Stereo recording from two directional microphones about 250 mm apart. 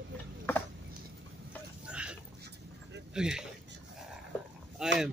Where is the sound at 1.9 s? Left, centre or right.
Centre.